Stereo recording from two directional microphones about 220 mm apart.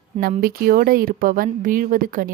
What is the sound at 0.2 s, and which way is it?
Speech, 40° right (ahead or behind).